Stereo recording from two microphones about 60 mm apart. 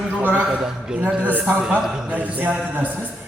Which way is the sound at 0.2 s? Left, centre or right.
Right.